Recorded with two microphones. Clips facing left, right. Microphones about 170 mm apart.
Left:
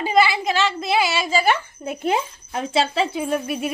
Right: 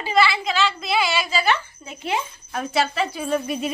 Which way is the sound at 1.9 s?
50° left (ahead or behind).